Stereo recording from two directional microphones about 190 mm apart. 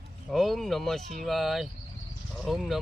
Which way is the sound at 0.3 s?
Centre (ahead or behind).